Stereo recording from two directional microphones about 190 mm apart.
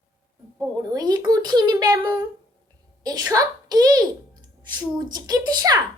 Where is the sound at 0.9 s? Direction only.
20° right (ahead or behind).